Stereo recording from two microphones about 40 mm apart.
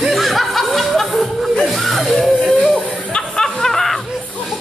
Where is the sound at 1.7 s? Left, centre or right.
Centre.